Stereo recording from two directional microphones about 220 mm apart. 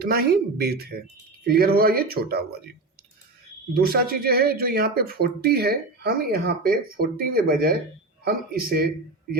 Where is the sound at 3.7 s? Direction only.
45° right (ahead or behind).